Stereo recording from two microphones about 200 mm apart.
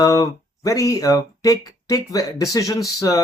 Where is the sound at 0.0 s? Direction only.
15° left (ahead or behind).